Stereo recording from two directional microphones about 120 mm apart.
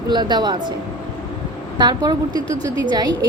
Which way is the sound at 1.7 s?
35° right (ahead or behind).